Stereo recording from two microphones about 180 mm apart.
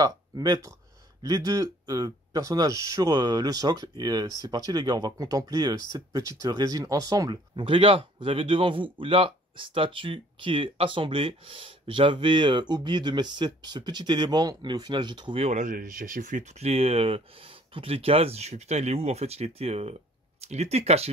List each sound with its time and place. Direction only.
0.0 s speech: 20° right (ahead or behind)